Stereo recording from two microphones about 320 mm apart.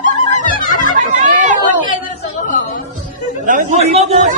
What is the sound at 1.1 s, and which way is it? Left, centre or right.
Chatter, right.